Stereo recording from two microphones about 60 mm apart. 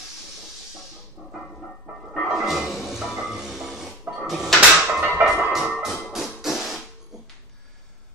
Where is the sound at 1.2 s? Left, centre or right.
Centre.